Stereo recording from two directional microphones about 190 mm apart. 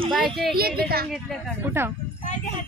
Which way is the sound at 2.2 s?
40° left (ahead or behind).